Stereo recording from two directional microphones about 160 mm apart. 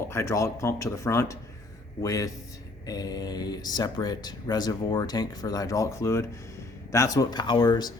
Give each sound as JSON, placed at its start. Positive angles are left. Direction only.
{"t": 0.1, "sound": "speech", "side_deg": 15}